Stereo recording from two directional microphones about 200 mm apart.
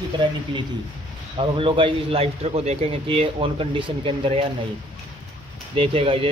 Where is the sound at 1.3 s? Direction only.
25° right (ahead or behind).